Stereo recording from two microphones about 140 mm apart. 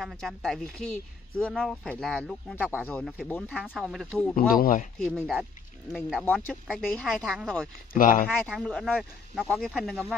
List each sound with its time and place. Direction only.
0.0 s speech: centre (ahead or behind)
3.6 s speech: 5° right (ahead or behind)
4.4 s speech: 80° left
4.9 s speech: centre (ahead or behind)
7.9 s speech: 75° left (ahead or behind)
8.5 s speech: centre (ahead or behind)